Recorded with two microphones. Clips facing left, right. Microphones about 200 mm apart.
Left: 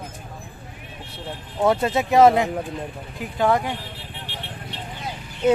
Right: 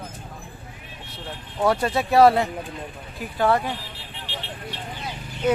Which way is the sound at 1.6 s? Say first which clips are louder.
Left 2 dB; 20° left (ahead or behind).